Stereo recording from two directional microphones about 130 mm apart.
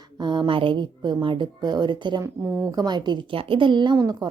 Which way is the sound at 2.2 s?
25° right (ahead or behind).